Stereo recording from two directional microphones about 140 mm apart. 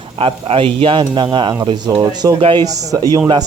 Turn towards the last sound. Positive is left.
turn(degrees=-35)  # may be behind; listen again after turning